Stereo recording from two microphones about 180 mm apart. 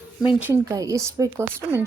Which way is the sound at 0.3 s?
10° right (ahead or behind).